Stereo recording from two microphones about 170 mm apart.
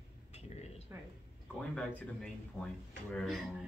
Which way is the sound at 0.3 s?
40° left (ahead or behind).